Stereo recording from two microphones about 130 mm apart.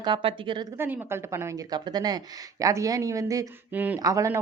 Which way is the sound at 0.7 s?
20° right (ahead or behind).